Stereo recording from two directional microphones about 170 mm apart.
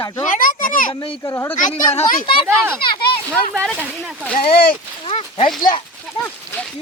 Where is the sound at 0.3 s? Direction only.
55° left (ahead or behind).